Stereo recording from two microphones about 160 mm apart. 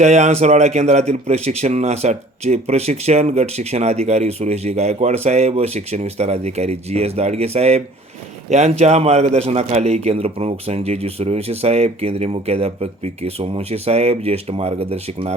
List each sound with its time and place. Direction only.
0.0 s speech: 45° right (ahead or behind)